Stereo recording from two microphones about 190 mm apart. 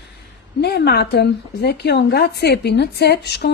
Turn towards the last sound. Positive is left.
turn(degrees=60)  # may be behind; listen again after turning